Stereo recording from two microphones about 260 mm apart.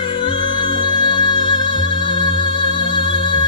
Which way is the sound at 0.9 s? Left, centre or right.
Centre.